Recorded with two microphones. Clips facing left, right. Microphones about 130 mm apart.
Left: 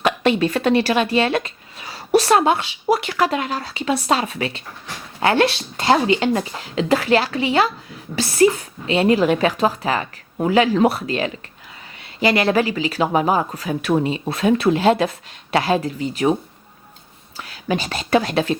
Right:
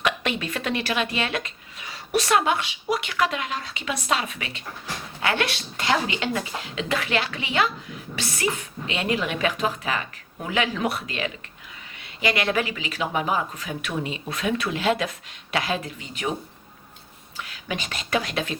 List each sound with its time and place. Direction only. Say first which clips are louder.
0.0 s speech: left 9 dB; 35° left (ahead or behind)
17.3 s speech: left 8 dB; 35° left (ahead or behind)